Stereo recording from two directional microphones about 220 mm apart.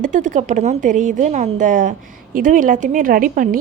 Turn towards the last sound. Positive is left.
turn(degrees=-40)  # may be behind; listen again after turning